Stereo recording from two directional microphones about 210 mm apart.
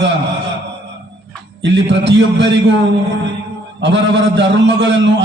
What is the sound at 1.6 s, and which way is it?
A man's voice, 55° right (ahead or behind).